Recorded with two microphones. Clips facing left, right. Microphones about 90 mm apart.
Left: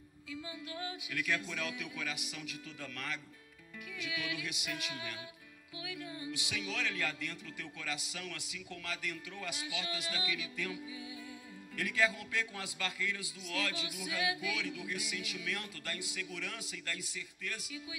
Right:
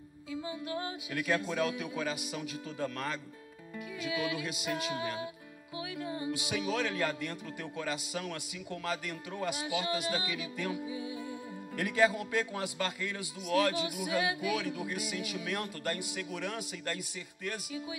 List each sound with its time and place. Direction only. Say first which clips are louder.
0.3 s a man's voice: right 7 dB; 30° right (ahead or behind)